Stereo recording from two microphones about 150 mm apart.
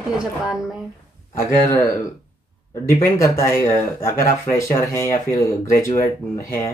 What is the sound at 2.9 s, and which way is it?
Speech, 20° left (ahead or behind).